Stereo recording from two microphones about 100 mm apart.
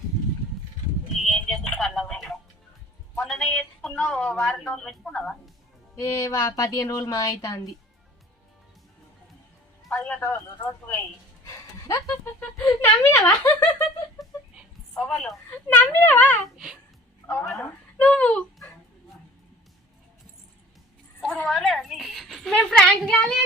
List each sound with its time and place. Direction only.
1.3 s a sound: 5° left (ahead or behind)
3.2 s music: 5° left (ahead or behind)
3.6 s a woman's voice: 10° left (ahead or behind)
6.0 s speech: 30° left (ahead or behind)
9.9 s a woman's voice: 15° left (ahead or behind)
11.4 s a sound: 35° left (ahead or behind)
12.8 s speech: 20° left (ahead or behind)
15.4 s a child's voice: 15° left (ahead or behind)
16.4 s speech: 5° right (ahead or behind)
18.0 s a woman's voice: 10° left (ahead or behind)
21.2 s a woman's voice: 5° left (ahead or behind)